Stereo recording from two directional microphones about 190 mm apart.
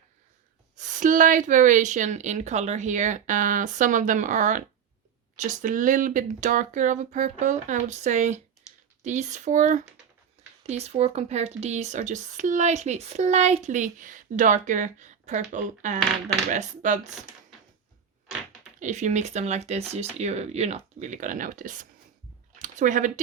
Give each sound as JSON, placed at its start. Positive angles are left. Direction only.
{"t": 0.8, "sound": "speech", "side_deg": -40}
{"t": 18.8, "sound": "speech", "side_deg": -40}